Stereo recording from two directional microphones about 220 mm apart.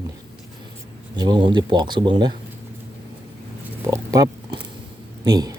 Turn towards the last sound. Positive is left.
turn(degrees=-15)  # may be behind; listen again after turning